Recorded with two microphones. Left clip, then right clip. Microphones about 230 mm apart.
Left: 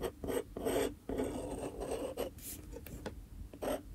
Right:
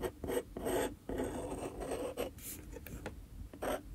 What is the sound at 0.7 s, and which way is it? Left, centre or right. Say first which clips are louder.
Filing: left 2 dB; centre.